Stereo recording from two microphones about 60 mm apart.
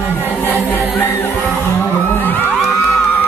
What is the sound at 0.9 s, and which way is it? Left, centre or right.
Music, left.